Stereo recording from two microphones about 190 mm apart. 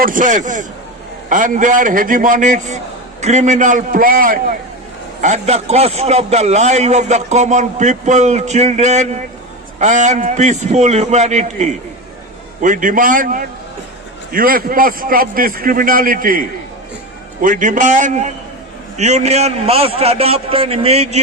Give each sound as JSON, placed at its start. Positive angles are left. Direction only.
{"t": 0.0, "sound": "a man's voice", "side_deg": -45}
{"t": 5.2, "sound": "a man's voice", "side_deg": -35}